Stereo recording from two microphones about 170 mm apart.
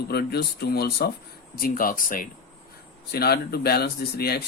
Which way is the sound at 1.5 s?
55° left (ahead or behind).